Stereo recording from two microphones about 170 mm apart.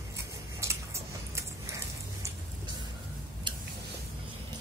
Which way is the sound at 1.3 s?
15° right (ahead or behind).